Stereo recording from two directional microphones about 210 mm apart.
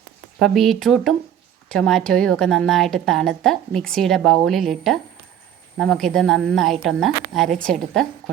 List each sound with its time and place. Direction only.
0.3 s a woman's voice: centre (ahead or behind)